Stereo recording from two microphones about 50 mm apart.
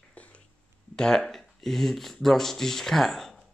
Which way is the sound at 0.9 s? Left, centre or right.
Centre.